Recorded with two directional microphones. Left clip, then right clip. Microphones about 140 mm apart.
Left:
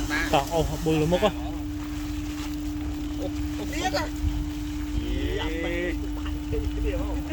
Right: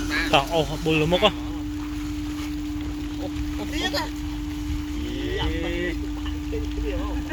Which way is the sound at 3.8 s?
85° right.